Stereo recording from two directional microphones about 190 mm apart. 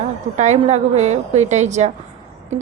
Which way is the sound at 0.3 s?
35° right (ahead or behind).